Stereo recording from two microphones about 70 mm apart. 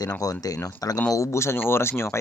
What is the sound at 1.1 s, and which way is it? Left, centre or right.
Speech, left.